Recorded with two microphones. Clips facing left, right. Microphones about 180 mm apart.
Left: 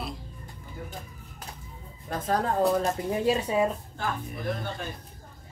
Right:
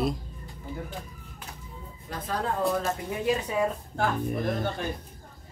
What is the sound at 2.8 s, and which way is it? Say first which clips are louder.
Speech: left 3 dB; 30° left (ahead or behind).